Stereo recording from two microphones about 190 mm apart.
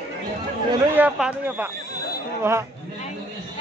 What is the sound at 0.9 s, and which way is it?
Speech, 10° right (ahead or behind).